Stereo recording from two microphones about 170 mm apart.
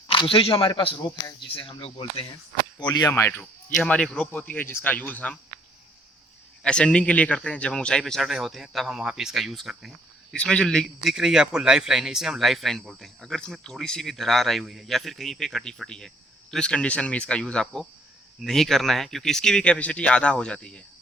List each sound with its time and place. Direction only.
0.1 s speech: 30° left (ahead or behind); by 5.4 s 10° left (ahead or behind)
6.6 s a man's voice: 5° left (ahead or behind)